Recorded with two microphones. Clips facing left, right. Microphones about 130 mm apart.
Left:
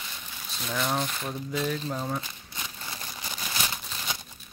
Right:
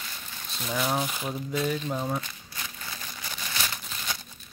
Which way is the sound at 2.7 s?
20° left (ahead or behind).